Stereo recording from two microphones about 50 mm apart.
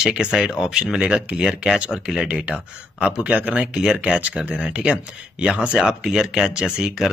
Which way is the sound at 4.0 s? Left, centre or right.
Right.